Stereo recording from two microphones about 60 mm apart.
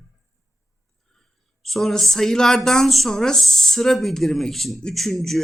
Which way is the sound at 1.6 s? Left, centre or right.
Centre.